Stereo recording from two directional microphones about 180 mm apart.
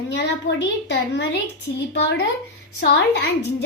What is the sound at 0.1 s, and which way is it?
A woman's voice, 75° left (ahead or behind).